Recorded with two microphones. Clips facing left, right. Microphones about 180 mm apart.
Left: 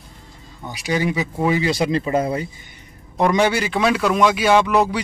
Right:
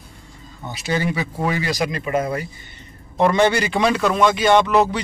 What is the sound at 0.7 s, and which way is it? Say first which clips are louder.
Speech: left 1 dB; 10° left (ahead or behind).